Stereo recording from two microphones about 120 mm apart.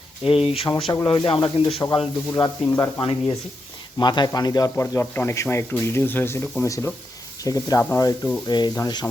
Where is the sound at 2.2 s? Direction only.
30° left (ahead or behind).